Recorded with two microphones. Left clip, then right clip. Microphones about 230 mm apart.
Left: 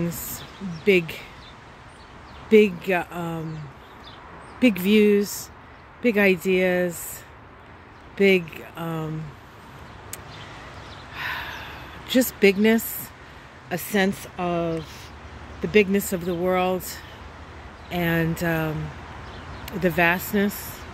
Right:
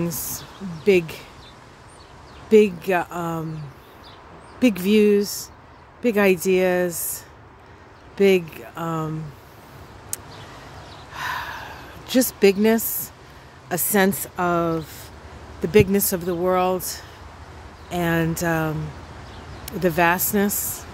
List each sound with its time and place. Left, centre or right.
0.8 s speech: centre
2.5 s speech: centre
4.6 s speech: centre
8.2 s speech: centre
11.1 s snort: centre
12.4 s speech: centre
17.8 s speech: centre